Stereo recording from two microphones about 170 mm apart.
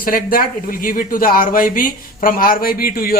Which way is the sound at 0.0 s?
55° left (ahead or behind).